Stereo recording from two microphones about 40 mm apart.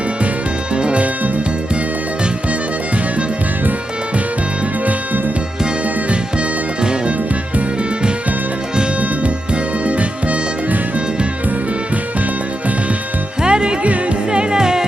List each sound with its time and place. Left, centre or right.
0.8 s music: right
13.4 s music: right